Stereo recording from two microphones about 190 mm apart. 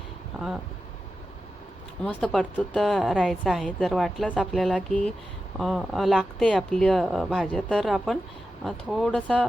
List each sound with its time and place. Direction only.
0.3 s speech: 5° right (ahead or behind)
2.2 s speech: 5° left (ahead or behind)